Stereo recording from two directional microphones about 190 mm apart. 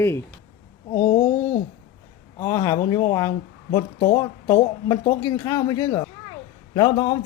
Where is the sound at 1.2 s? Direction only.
15° left (ahead or behind).